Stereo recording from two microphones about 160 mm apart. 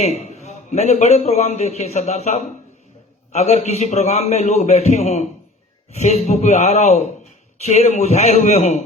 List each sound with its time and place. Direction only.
0.0 s a man's voice: 45° left (ahead or behind)